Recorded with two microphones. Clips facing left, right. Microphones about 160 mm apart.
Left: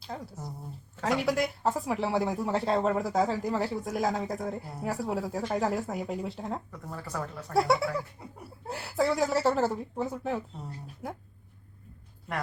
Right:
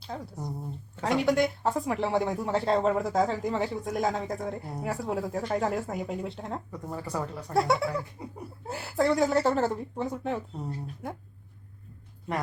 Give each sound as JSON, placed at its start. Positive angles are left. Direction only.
{"t": 0.0, "sound": "speech", "side_deg": 0}
{"t": 6.7, "sound": "speech", "side_deg": -20}
{"t": 7.5, "sound": "speech", "side_deg": 0}